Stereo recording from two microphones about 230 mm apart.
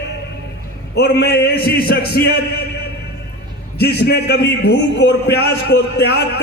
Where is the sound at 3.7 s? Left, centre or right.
Left.